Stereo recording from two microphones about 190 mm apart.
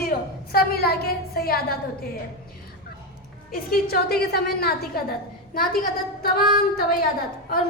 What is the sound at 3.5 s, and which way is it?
A woman's voice, 55° left (ahead or behind).